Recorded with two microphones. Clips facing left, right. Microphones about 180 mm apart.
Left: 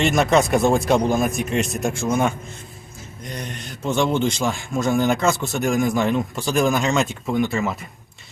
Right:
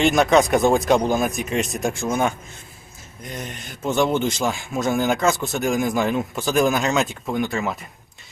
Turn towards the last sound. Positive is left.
turn(degrees=0)  # may be behind; listen again after turning